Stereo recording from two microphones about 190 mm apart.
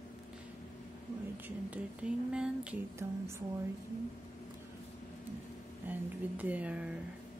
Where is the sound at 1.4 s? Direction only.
5° right (ahead or behind).